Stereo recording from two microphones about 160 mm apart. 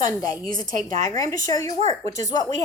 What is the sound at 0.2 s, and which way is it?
Speech, 25° left (ahead or behind).